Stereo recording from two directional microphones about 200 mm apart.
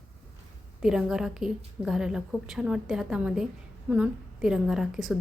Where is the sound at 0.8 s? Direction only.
5° right (ahead or behind).